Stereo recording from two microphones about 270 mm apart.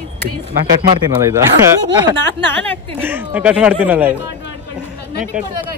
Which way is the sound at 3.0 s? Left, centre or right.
Centre.